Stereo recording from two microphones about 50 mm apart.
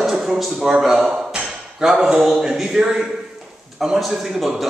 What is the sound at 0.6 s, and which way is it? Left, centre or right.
A man's voice, centre.